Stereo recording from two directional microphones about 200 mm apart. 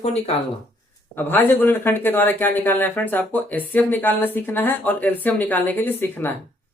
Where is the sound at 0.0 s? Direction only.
30° left (ahead or behind).